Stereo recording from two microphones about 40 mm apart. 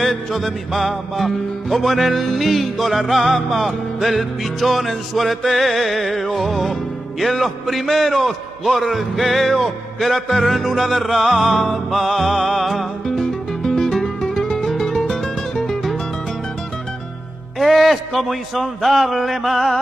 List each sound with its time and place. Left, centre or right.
0.0 s music: centre
13.6 s music: centre
13.8 s music: centre
17.6 s music: centre